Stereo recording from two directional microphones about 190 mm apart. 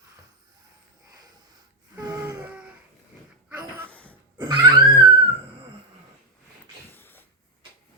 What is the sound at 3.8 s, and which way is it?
Cough, 5° left (ahead or behind).